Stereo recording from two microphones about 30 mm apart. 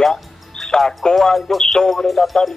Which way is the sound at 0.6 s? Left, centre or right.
Left.